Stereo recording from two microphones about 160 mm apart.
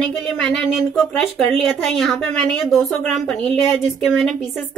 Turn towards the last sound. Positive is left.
turn(degrees=0)  # may be behind; listen again after turning